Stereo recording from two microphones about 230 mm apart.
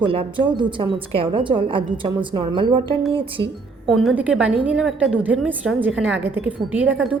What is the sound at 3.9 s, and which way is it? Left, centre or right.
A woman's voice, centre.